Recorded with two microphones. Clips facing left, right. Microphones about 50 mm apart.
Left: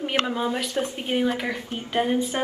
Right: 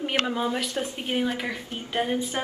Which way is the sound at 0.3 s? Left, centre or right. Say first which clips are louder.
Left 1 dB; centre.